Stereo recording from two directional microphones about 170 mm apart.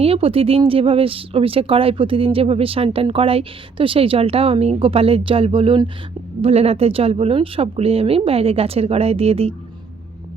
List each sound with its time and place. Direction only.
0.0 s speech: 35° right (ahead or behind)